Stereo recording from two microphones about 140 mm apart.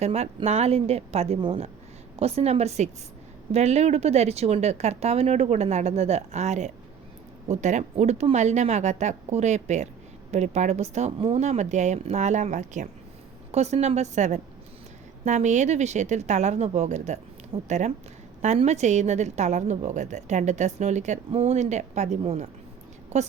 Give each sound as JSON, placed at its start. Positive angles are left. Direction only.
{"t": 0.0, "sound": "a woman's voice", "side_deg": -50}
{"t": 13.5, "sound": "a woman's voice", "side_deg": -50}